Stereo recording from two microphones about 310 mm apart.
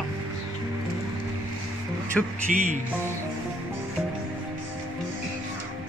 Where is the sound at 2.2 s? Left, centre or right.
Centre.